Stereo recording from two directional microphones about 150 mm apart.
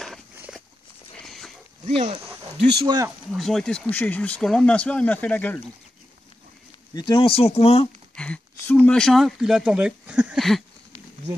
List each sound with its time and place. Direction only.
1.1 s livestock: 5° left (ahead or behind)
1.9 s speech: 45° right (ahead or behind)
2.8 s speech: 30° right (ahead or behind)
3.3 s speech: centre (ahead or behind)
6.9 s speech: 30° left (ahead or behind)
8.2 s speech: 10° left (ahead or behind)